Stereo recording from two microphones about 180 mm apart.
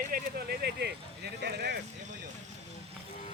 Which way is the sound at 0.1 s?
60° right (ahead or behind).